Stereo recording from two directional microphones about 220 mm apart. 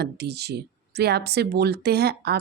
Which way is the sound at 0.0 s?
50° right (ahead or behind).